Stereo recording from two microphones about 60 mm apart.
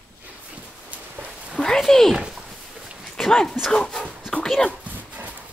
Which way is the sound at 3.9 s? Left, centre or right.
Centre.